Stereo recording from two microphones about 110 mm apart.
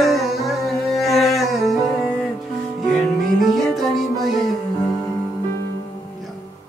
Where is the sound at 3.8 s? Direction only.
Centre (ahead or behind).